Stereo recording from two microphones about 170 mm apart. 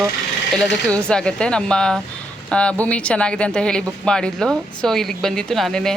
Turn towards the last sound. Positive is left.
turn(degrees=5)  # may be behind; listen again after turning